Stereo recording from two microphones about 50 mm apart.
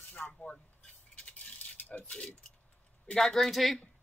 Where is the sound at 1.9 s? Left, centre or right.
Left.